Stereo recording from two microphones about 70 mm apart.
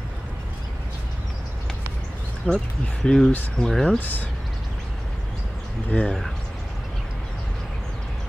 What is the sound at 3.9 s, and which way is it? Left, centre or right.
Speech, left.